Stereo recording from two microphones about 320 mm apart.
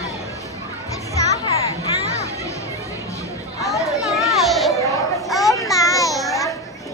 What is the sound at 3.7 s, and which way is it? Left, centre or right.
Children playing, centre.